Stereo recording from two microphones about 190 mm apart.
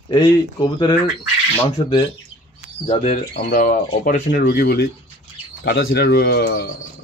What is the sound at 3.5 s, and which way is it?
Speech, 50° left (ahead or behind).